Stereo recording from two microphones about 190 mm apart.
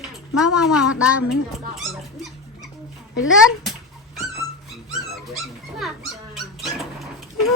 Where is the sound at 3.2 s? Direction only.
Centre (ahead or behind).